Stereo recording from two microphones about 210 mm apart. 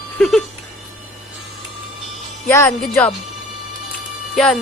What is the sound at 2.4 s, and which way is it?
Speech, 15° left (ahead or behind).